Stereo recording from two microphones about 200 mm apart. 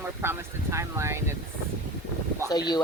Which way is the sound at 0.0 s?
10° right (ahead or behind).